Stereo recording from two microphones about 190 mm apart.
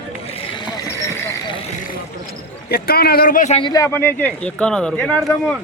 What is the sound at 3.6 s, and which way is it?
Speech, 20° left (ahead or behind).